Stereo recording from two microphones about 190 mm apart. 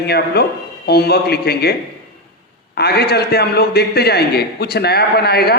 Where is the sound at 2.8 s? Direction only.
55° left (ahead or behind).